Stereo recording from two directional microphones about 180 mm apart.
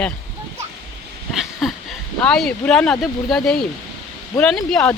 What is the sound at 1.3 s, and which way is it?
Speech, centre (ahead or behind).